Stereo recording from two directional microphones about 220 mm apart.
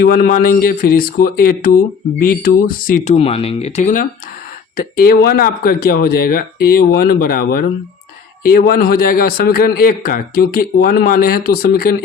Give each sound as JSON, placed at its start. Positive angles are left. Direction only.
{"t": 0.0, "sound": "a man's voice", "side_deg": 40}